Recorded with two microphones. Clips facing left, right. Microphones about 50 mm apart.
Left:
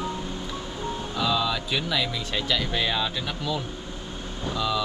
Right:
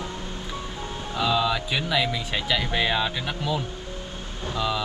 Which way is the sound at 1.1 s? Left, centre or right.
Centre.